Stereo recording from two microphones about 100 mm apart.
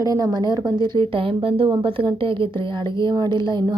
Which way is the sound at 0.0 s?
35° right (ahead or behind).